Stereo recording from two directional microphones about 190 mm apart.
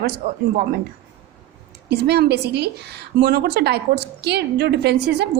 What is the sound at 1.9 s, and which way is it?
Speech, 60° right (ahead or behind).